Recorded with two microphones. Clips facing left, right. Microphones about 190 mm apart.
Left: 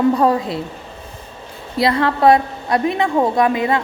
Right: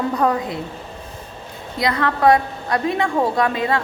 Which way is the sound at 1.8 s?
25° left (ahead or behind).